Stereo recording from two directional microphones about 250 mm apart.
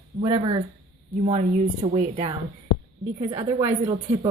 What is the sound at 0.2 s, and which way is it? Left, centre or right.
A woman's voice, centre.